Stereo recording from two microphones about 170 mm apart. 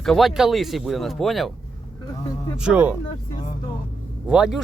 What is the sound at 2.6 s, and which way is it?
Speech, 10° right (ahead or behind).